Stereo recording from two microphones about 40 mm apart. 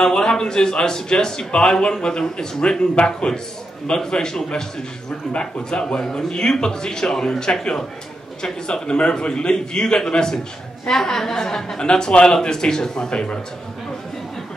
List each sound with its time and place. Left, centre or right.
0.0 s a man's voice: centre
3.3 s a man's voice: centre